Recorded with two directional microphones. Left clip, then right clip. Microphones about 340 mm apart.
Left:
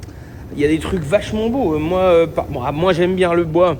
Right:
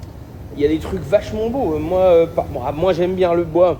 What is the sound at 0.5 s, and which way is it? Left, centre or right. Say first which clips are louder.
Speech: left 1 dB; left.